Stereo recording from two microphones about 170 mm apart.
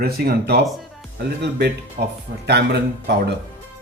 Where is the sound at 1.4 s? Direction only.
80° right.